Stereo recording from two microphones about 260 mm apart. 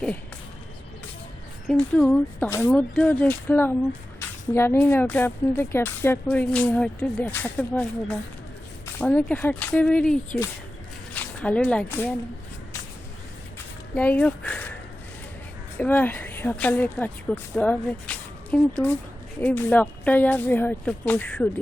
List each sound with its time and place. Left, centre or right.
1.6 s speech: centre
13.9 s speech: centre
15.8 s speech: centre